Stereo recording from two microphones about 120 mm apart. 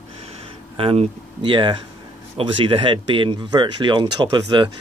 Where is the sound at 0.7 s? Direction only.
50° right (ahead or behind).